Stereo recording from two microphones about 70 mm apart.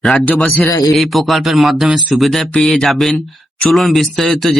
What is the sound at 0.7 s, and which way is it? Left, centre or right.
Speech, left.